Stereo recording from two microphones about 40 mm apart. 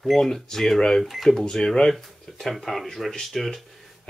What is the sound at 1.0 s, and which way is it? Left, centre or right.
Speech, centre.